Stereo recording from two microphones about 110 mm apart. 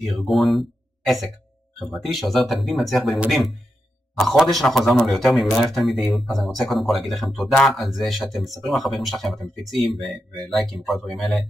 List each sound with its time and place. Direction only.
0.0 s a man's voice: centre (ahead or behind)